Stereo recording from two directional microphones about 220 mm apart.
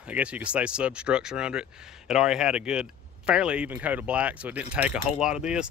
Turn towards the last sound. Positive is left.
turn(degrees=-5)  # may be behind; listen again after turning